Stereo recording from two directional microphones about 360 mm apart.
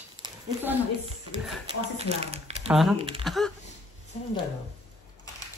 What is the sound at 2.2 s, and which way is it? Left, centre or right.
Speech, centre.